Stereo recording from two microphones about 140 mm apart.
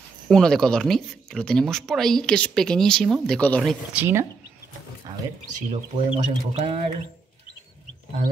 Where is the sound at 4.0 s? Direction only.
20° right (ahead or behind).